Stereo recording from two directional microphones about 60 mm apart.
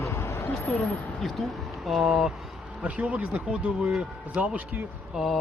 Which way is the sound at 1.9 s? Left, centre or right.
Centre.